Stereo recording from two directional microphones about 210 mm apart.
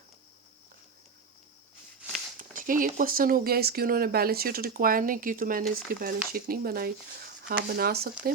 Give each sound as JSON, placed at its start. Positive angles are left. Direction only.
{"t": 2.4, "sound": "speech", "side_deg": -40}